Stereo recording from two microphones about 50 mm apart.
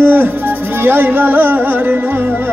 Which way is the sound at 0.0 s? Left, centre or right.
Right.